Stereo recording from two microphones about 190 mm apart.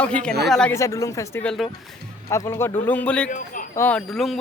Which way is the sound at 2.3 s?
15° left (ahead or behind).